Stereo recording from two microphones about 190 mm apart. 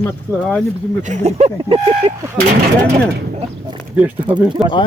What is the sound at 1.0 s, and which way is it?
Speech, 35° right (ahead or behind).